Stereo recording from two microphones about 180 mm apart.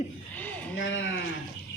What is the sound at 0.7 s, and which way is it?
Speech, 90° left.